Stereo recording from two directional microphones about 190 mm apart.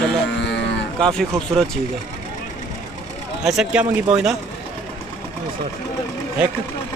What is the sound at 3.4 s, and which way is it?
Speech, centre (ahead or behind).